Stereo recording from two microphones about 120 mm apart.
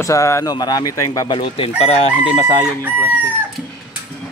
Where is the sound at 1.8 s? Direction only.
60° left (ahead or behind).